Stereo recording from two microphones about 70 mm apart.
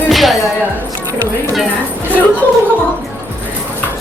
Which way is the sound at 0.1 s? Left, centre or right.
Centre.